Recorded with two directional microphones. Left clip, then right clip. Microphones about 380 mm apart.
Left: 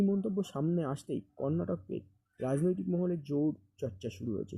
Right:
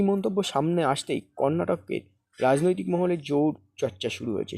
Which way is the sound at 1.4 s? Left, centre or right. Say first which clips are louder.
Right 11 dB; centre.